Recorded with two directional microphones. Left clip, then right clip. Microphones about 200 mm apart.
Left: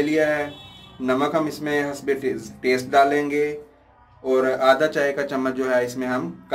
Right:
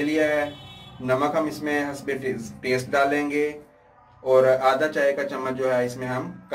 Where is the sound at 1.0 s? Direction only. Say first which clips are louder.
Left 1 dB; 55° left (ahead or behind).